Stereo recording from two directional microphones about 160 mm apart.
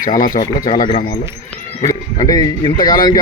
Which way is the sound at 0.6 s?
60° left (ahead or behind).